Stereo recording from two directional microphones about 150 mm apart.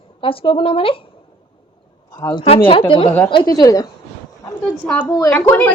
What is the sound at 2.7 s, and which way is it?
A woman's voice, 35° left (ahead or behind).